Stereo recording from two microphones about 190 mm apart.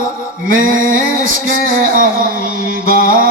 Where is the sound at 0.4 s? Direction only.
45° right (ahead or behind).